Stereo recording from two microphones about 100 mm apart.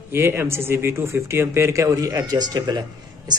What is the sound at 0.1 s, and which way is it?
Speech, 20° right (ahead or behind).